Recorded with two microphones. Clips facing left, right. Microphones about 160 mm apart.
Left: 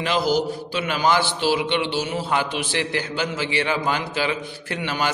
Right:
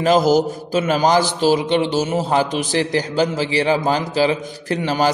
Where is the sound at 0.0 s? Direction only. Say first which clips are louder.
Right 7 dB; 45° right (ahead or behind).